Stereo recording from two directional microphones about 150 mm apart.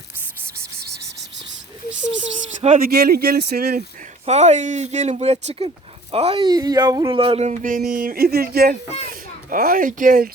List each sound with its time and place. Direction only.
2.7 s speech: 85° right
4.3 s speech: 50° right (ahead or behind)
6.5 s speech: 25° right (ahead or behind)
7.2 s speech: 40° right (ahead or behind); by 10.2 s 65° right (ahead or behind)